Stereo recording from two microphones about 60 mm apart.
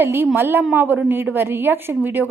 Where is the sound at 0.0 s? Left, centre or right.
Right.